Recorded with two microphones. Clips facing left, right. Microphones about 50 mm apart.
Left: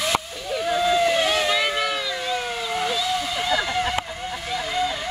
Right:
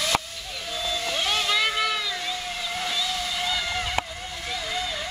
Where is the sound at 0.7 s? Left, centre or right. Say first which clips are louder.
Left 10 dB; left.